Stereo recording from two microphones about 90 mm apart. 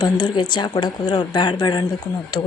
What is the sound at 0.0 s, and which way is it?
Speech, 55° left (ahead or behind).